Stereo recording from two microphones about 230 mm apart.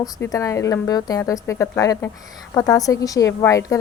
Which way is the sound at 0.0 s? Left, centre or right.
Centre.